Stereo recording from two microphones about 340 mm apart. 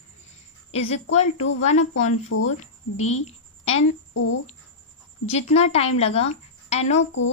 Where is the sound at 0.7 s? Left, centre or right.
Centre.